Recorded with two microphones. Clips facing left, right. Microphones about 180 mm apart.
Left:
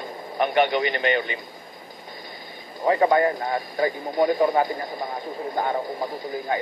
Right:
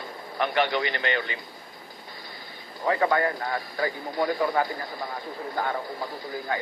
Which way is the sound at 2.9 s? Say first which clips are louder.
Left 5 dB; 20° left (ahead or behind).